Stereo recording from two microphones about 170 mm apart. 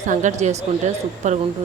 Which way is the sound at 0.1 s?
45° right (ahead or behind).